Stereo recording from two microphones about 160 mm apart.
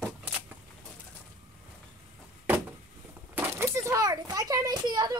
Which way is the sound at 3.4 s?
15° right (ahead or behind).